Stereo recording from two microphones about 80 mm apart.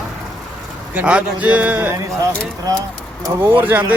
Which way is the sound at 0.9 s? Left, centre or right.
Centre.